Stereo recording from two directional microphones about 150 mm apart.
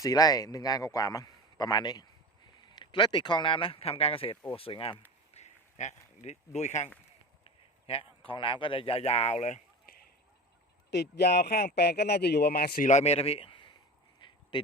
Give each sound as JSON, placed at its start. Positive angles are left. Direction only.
{"t": 0.0, "sound": "a man's voice", "side_deg": 25}
{"t": 5.3, "sound": "a sound", "side_deg": 50}
{"t": 7.4, "sound": "speech", "side_deg": 40}
{"t": 10.9, "sound": "speech", "side_deg": 90}
{"t": 12.9, "sound": "speech", "side_deg": 45}
{"t": 14.2, "sound": "a sound", "side_deg": 30}